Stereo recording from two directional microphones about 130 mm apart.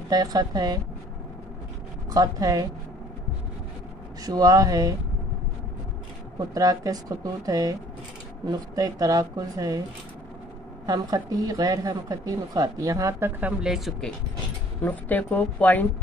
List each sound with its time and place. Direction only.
0.1 s a woman's voice: 30° right (ahead or behind)
2.1 s a woman's voice: 30° right (ahead or behind)
4.2 s a woman's voice: 30° right (ahead or behind)
6.5 s a woman's voice: 25° right (ahead or behind)
10.9 s a woman's voice: 30° right (ahead or behind)
13.4 s a woman's voice: 10° right (ahead or behind)
14.8 s a woman's voice: 15° left (ahead or behind)